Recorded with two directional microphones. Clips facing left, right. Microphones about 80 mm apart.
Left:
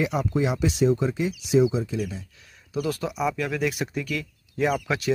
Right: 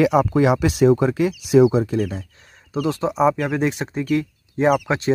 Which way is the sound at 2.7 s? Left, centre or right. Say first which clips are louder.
Right 6 dB; right.